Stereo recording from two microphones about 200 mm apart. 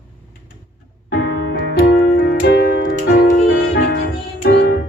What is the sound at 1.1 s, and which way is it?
Music, 55° left (ahead or behind).